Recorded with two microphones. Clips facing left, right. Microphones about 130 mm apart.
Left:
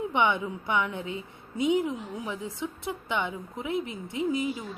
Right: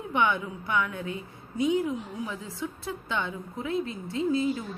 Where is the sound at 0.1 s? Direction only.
20° left (ahead or behind).